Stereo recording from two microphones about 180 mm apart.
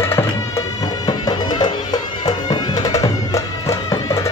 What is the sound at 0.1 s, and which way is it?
Music, 20° left (ahead or behind).